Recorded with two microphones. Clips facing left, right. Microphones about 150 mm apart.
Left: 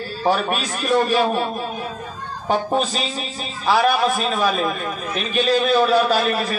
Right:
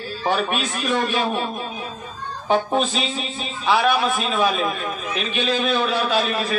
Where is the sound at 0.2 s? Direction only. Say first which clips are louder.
Left 2 dB; 40° left (ahead or behind).